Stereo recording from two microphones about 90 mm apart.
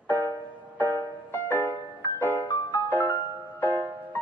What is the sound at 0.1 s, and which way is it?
Music, 20° left (ahead or behind).